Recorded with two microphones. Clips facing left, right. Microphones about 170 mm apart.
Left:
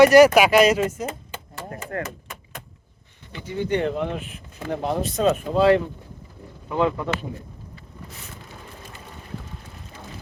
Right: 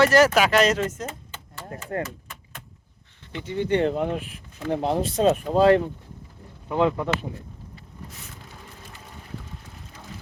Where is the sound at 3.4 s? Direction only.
25° right (ahead or behind); by 5.8 s 40° right (ahead or behind).